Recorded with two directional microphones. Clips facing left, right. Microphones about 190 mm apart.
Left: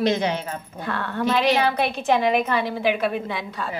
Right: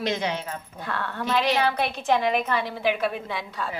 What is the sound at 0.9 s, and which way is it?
A woman's voice, centre (ahead or behind).